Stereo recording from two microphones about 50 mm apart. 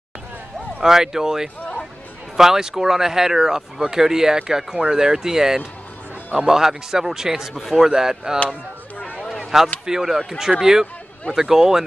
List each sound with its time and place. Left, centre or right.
0.7 s speech: centre
7.5 s a man's voice: centre
7.8 s speech: centre
9.4 s a sound: centre
9.8 s speech: centre